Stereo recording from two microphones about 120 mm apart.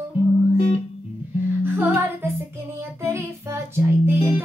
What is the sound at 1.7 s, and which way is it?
Music, 15° right (ahead or behind).